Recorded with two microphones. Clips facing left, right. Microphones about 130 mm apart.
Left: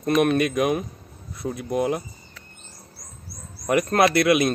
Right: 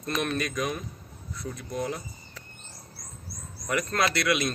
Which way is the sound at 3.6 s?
55° left (ahead or behind).